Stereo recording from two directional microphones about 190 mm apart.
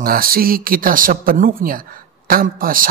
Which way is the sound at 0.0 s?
50° right (ahead or behind).